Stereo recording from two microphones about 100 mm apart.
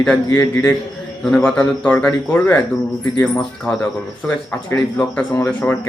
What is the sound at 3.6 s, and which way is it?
Speech, 10° left (ahead or behind).